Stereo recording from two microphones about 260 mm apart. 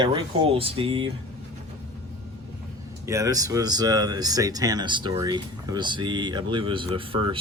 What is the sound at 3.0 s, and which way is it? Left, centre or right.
Speech, centre.